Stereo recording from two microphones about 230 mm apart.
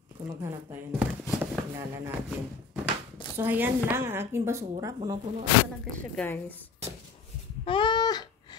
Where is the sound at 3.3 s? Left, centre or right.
Centre.